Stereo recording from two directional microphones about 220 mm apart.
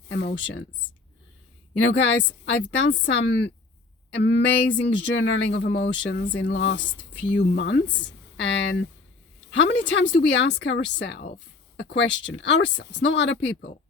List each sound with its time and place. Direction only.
0.1 s speech: 50° left (ahead or behind)
2.0 s a woman's voice: 55° left (ahead or behind)